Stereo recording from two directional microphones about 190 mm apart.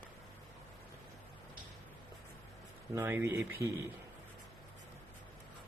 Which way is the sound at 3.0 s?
10° right (ahead or behind).